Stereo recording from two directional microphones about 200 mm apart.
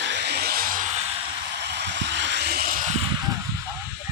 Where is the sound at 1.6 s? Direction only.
60° right (ahead or behind); by 3.0 s 40° right (ahead or behind).